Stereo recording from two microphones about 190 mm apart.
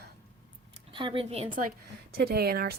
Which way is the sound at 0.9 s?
25° right (ahead or behind).